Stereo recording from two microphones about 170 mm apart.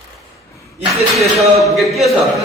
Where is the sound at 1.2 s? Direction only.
Centre (ahead or behind).